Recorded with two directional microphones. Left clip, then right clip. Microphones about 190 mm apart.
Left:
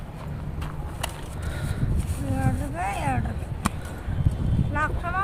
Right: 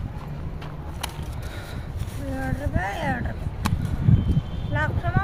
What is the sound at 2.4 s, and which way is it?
Vehicle, 45° left (ahead or behind).